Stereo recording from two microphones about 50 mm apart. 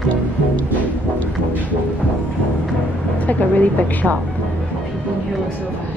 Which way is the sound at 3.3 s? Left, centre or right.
Left.